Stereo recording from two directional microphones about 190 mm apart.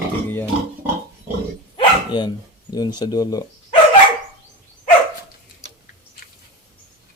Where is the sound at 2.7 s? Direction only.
20° left (ahead or behind).